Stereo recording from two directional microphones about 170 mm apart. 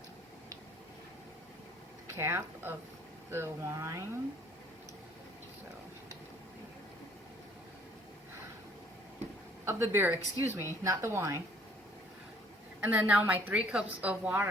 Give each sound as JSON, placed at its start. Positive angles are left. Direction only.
{"t": 2.1, "sound": "a woman's voice", "side_deg": -15}
{"t": 9.6, "sound": "a woman's voice", "side_deg": -15}
{"t": 12.8, "sound": "a woman's voice", "side_deg": -10}